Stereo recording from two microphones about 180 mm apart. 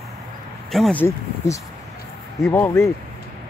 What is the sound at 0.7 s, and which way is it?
Speech, centre (ahead or behind).